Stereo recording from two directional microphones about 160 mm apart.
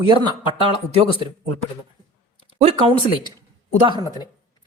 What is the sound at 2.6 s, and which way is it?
Speech, 35° right (ahead or behind).